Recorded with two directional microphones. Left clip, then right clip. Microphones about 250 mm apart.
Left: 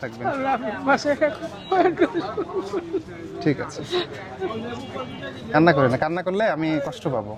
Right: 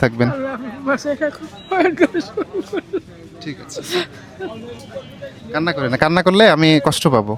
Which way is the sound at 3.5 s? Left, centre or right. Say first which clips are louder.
Left 8 dB; centre.